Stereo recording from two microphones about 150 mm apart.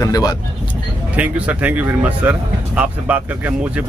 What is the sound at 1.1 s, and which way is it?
Speech, 10° right (ahead or behind).